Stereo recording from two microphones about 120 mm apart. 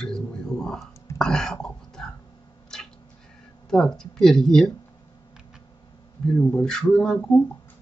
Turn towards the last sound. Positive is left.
turn(degrees=10)  # may be behind; listen again after turning